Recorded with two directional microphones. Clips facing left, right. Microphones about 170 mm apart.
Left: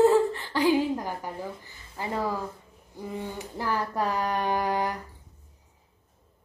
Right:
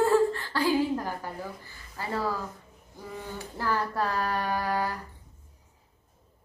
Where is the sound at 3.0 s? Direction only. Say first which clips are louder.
Left 4 dB; 15° left (ahead or behind).